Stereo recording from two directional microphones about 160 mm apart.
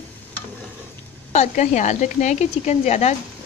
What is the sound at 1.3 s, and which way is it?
Speech, 50° left (ahead or behind).